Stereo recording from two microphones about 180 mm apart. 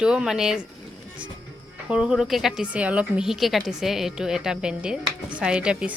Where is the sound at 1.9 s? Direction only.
5° right (ahead or behind).